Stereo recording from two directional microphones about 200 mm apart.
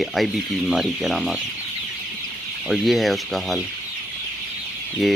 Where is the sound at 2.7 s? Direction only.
Centre (ahead or behind).